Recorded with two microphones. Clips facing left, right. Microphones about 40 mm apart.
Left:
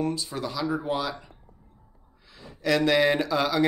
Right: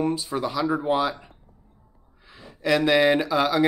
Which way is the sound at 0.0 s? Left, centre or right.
Centre.